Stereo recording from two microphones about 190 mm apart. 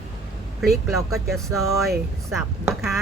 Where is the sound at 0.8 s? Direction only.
Centre (ahead or behind).